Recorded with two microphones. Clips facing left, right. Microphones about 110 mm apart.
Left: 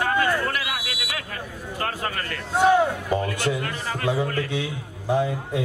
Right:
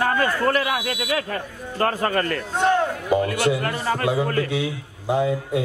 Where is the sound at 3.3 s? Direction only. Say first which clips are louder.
Right 4 dB; 45° right (ahead or behind).